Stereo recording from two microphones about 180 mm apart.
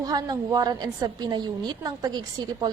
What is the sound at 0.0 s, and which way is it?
A woman's voice, 20° right (ahead or behind).